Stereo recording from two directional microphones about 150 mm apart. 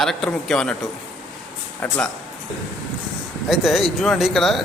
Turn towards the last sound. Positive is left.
turn(degrees=0)  # may be behind; listen again after turning